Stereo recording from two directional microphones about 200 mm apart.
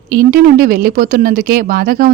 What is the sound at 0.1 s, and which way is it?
A woman's voice, 45° right (ahead or behind).